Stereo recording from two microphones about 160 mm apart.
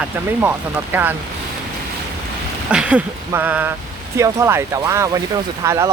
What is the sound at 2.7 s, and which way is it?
Speech, 5° right (ahead or behind).